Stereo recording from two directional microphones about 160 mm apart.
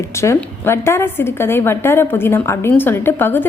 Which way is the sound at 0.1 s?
15° left (ahead or behind).